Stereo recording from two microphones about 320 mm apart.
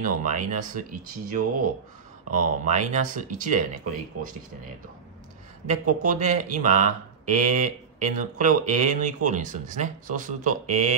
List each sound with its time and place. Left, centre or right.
0.0 s speech: right
5.7 s speech: right